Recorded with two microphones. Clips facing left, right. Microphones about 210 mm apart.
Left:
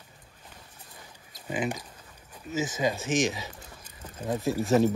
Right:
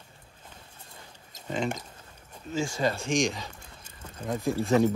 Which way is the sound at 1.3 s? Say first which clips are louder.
Even; 5° left (ahead or behind).